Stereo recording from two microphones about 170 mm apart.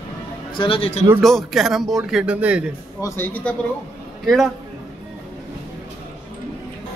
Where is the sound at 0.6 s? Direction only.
30° left (ahead or behind).